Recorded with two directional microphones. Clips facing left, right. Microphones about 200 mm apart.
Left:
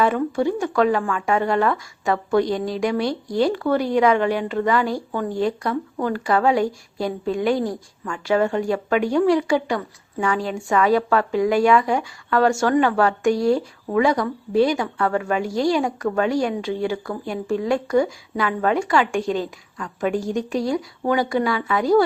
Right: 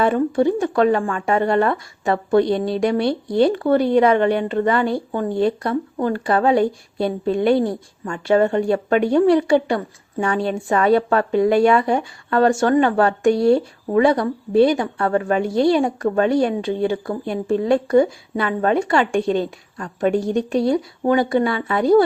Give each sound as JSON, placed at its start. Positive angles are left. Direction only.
{"t": 0.0, "sound": "a woman's voice", "side_deg": -30}